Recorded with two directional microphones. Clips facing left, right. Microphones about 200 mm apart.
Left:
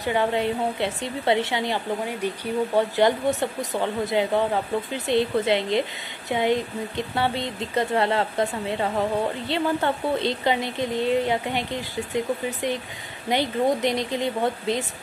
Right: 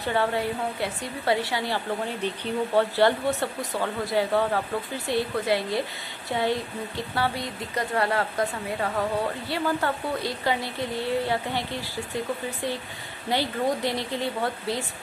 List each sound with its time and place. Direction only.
0.0 s a woman's voice: 15° left (ahead or behind)